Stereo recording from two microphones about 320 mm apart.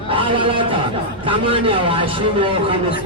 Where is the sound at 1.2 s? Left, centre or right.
Centre.